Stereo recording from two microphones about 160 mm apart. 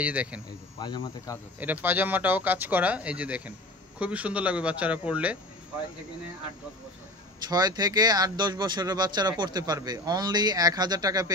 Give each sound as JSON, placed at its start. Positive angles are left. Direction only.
{"t": 0.0, "sound": "speech", "side_deg": -10}
{"t": 0.7, "sound": "speech", "side_deg": 30}
{"t": 1.6, "sound": "speech", "side_deg": -10}
{"t": 7.4, "sound": "speech", "side_deg": -25}